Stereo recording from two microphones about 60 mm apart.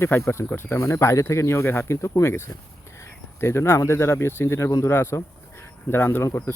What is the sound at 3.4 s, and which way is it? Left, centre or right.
Speech, left.